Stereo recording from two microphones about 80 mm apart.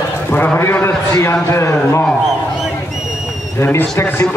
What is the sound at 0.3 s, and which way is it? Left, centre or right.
A man's voice, left.